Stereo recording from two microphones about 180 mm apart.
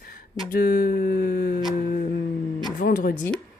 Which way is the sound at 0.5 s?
65° left (ahead or behind).